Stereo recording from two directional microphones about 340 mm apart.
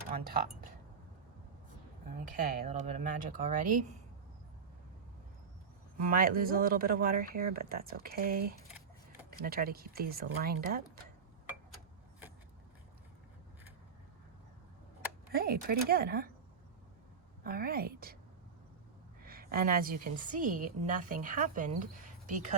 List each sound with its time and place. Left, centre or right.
2.0 s a woman's voice: right
6.1 s a woman's voice: right
15.3 s a woman's voice: right
17.4 s a woman's voice: right
19.2 s a woman's voice: right